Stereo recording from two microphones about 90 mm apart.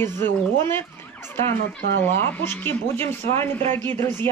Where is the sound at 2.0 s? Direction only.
25° left (ahead or behind).